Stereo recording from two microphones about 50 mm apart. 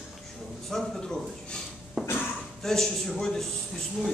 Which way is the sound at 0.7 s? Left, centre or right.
Centre.